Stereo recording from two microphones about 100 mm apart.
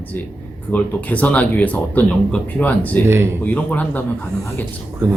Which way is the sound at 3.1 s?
25° right (ahead or behind).